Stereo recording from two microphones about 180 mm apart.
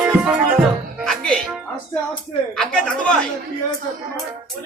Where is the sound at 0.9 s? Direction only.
5° left (ahead or behind).